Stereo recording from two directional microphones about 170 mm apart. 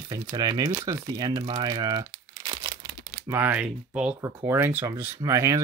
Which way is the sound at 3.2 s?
10° right (ahead or behind).